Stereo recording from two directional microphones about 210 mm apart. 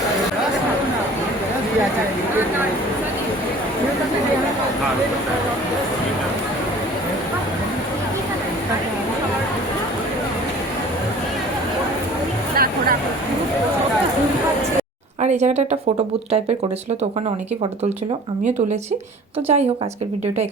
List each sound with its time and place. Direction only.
12.5 s a sound: 45° right (ahead or behind)
15.2 s speech: 35° right (ahead or behind)
19.5 s a woman's voice: 30° right (ahead or behind)